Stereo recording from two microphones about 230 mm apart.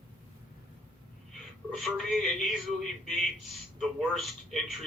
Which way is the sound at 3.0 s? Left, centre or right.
Centre.